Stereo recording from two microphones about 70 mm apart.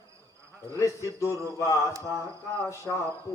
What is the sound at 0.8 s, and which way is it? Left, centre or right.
Mantra, left.